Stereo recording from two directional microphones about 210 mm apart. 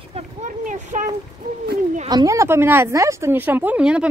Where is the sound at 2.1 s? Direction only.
15° right (ahead or behind).